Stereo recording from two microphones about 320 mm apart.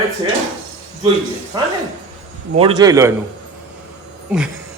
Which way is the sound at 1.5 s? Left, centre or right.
Centre.